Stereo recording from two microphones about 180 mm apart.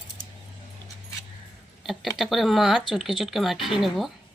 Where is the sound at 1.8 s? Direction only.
Centre (ahead or behind).